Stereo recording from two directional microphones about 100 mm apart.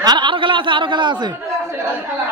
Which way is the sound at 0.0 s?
45° right (ahead or behind).